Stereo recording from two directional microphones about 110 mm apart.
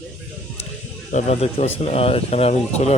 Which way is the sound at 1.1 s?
80° left.